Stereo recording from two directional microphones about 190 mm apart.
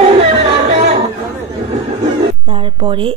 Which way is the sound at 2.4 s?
30° right (ahead or behind).